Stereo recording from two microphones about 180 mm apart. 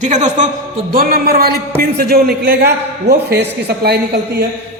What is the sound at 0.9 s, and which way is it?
A man's voice, 55° right (ahead or behind).